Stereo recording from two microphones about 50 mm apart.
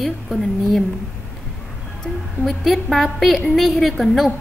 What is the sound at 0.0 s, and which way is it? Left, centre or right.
Speech, centre.